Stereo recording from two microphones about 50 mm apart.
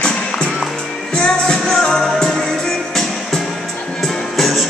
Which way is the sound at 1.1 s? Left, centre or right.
Centre.